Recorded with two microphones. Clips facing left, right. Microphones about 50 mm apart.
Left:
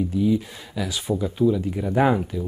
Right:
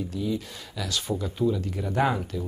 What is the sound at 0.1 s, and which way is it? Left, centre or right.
Speech, centre.